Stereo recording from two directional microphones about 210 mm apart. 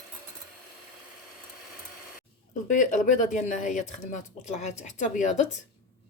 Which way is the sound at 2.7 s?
35° left (ahead or behind).